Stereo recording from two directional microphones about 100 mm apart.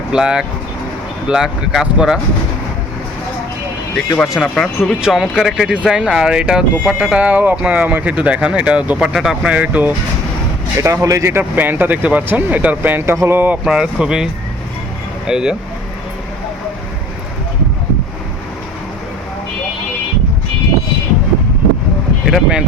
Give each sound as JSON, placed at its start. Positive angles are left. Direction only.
{"t": 0.1, "sound": "speech", "side_deg": -5}
{"t": 4.2, "sound": "speech", "side_deg": 15}
{"t": 4.5, "sound": "speech", "side_deg": 0}
{"t": 10.8, "sound": "speech", "side_deg": -30}
{"t": 13.7, "sound": "speech", "side_deg": -10}
{"t": 15.3, "sound": "speech", "side_deg": -5}
{"t": 22.3, "sound": "speech", "side_deg": -10}